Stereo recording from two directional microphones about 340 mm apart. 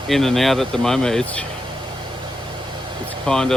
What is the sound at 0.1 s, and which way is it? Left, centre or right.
Speech, centre.